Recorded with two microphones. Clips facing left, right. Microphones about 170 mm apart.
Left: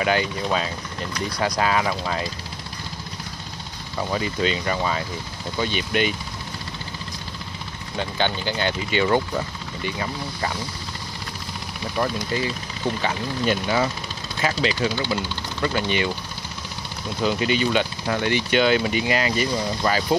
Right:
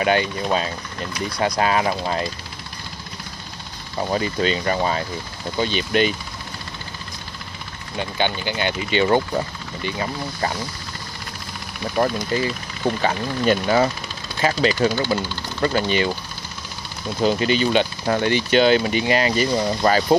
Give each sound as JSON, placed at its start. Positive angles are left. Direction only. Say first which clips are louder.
{"t": 0.0, "sound": "speech", "louder": "right 2 dB", "side_deg": -30}
{"t": 4.1, "sound": "speech", "louder": "right 2 dB", "side_deg": -35}
{"t": 8.0, "sound": "speech", "louder": "right 1 dB", "side_deg": -15}
{"t": 12.3, "sound": "speech", "louder": "right 3 dB", "side_deg": -35}
{"t": 17.2, "sound": "speech", "louder": "right 3 dB", "side_deg": -35}